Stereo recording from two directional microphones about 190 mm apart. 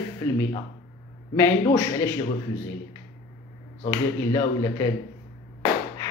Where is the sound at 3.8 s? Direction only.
20° left (ahead or behind).